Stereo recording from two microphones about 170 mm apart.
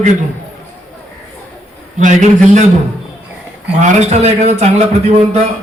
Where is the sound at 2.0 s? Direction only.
45° right (ahead or behind).